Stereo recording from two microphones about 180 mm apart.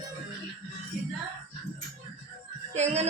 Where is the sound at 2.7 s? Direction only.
40° right (ahead or behind).